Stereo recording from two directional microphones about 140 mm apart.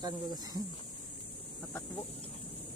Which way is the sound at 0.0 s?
30° right (ahead or behind).